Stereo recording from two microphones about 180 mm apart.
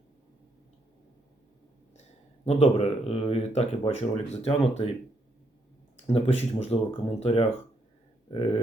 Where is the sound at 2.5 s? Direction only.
35° left (ahead or behind).